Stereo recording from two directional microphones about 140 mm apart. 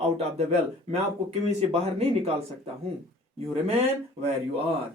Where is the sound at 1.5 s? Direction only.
50° right (ahead or behind).